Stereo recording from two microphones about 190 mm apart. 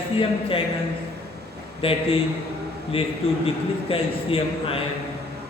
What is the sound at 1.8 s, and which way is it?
A man's voice, 30° left (ahead or behind).